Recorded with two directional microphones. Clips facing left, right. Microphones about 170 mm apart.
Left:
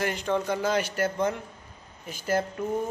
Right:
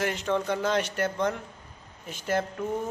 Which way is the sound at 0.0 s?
Centre (ahead or behind).